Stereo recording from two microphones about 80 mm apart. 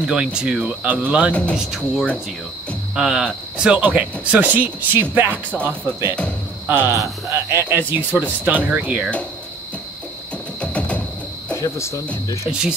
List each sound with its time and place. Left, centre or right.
0.0 s speech: centre
1.3 s speech: centre
1.6 s speech: centre; by 5.4 s right
6.7 s speech: right
10.6 s a sound: centre
11.5 s speech: left
12.4 s speech: centre